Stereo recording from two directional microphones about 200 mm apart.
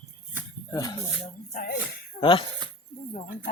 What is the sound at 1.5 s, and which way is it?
Speech, 45° left (ahead or behind).